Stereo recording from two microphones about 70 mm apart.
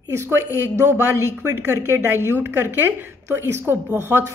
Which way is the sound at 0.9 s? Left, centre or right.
Right.